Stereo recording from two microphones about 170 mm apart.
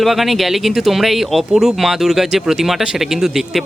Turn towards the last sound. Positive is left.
turn(degrees=0)  # may be behind; listen again after turning